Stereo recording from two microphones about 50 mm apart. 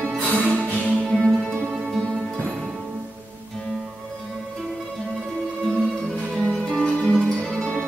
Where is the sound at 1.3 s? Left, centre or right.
Centre.